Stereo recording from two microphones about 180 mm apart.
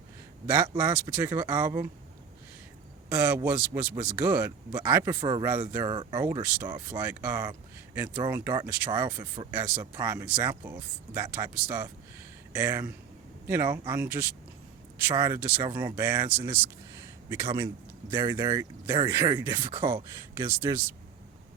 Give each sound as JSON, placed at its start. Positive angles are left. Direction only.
{"t": 0.4, "sound": "speech", "side_deg": -10}
{"t": 3.1, "sound": "speech", "side_deg": -10}
{"t": 5.2, "sound": "speech", "side_deg": -25}
{"t": 9.5, "sound": "speech", "side_deg": -10}
{"t": 9.8, "sound": "speech", "side_deg": -20}
{"t": 10.1, "sound": "a man's voice", "side_deg": -10}
{"t": 19.8, "sound": "speech", "side_deg": -15}